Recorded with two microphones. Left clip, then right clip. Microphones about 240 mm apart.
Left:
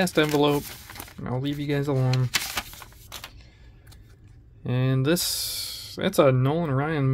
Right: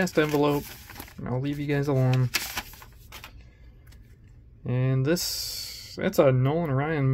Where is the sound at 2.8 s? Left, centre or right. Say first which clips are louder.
Left 4 dB; left.